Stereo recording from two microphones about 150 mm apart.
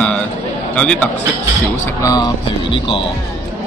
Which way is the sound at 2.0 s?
25° left (ahead or behind).